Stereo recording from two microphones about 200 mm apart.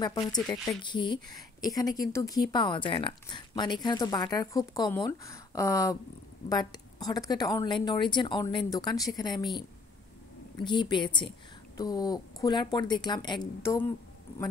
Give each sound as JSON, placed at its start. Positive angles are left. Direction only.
{"t": 0.0, "sound": "a woman's voice", "side_deg": 20}
{"t": 10.6, "sound": "a woman's voice", "side_deg": 25}